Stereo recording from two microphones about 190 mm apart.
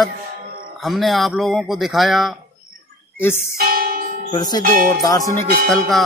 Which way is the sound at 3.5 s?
50° right (ahead or behind).